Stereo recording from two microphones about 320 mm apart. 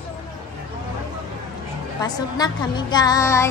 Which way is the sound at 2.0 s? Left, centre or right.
Centre.